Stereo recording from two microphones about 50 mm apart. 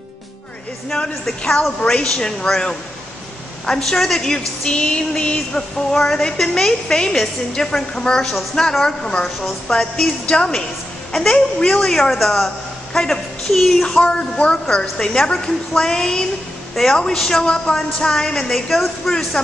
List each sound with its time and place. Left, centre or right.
0.8 s a woman's voice: centre
16.7 s a woman's voice: centre